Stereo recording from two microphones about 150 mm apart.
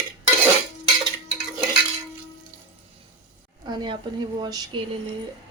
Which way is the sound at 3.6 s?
30° right (ahead or behind).